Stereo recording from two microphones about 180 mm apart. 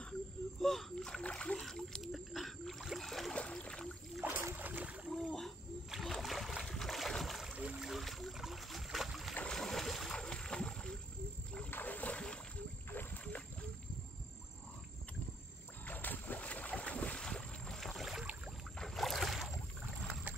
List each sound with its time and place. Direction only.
0.6 s rowboat: centre (ahead or behind)
4.2 s boat: 10° right (ahead or behind)
5.1 s splash: centre (ahead or behind)
11.5 s boat: 10° left (ahead or behind)
15.8 s boat: 10° left (ahead or behind)